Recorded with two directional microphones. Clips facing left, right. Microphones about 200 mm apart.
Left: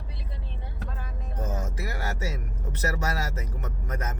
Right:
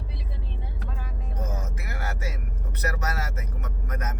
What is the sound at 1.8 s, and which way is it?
Music, 30° left (ahead or behind).